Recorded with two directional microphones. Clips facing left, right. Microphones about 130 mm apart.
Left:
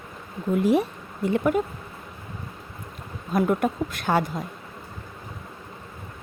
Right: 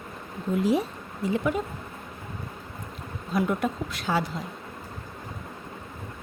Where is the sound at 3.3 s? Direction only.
50° left (ahead or behind).